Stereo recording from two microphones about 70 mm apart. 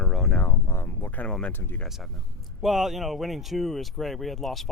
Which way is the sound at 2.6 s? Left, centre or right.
Centre.